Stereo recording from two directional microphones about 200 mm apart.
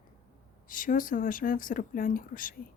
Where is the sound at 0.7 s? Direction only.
40° left (ahead or behind).